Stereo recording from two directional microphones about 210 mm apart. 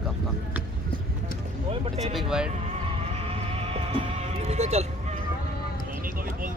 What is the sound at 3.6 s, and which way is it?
Music, 30° right (ahead or behind).